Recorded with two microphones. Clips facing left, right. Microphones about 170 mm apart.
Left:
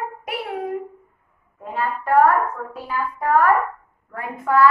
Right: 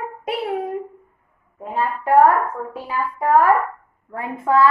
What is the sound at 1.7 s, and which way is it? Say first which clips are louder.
A child's voice: right 2 dB; 25° right (ahead or behind).